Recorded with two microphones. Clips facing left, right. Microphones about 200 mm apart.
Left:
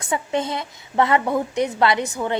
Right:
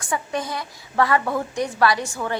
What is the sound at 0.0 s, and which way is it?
A woman's voice, 20° left (ahead or behind).